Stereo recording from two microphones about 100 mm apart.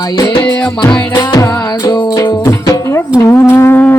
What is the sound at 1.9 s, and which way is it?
Music, 40° left (ahead or behind).